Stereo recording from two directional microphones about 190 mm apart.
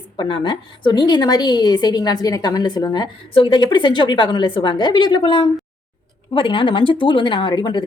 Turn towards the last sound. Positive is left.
turn(degrees=25)  # may be behind; listen again after turning